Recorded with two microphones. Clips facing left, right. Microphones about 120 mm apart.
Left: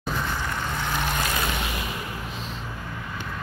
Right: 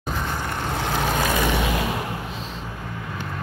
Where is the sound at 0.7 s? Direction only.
75° right (ahead or behind).